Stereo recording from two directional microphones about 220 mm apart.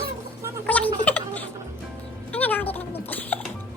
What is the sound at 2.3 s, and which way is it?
Music, 5° left (ahead or behind).